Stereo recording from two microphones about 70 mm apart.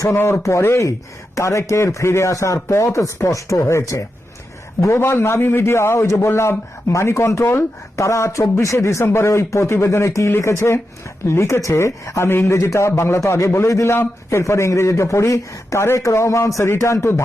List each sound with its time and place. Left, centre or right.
0.2 s a man's voice: left
1.4 s a man's voice: left